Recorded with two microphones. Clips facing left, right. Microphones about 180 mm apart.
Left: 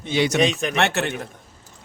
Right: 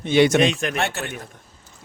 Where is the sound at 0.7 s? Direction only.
75° left (ahead or behind).